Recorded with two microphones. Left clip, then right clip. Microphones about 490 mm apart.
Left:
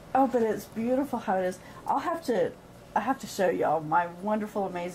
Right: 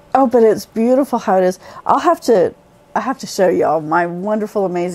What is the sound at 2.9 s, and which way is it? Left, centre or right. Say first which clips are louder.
A woman's voice: right 9 dB; right.